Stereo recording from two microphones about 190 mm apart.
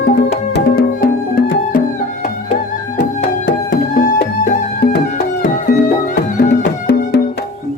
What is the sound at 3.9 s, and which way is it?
Music, 50° left (ahead or behind).